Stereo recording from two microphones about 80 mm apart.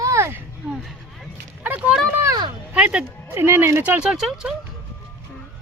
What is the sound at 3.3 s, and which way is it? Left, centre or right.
Speech, right.